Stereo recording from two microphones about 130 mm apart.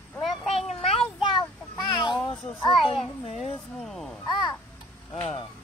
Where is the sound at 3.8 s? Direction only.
Centre (ahead or behind).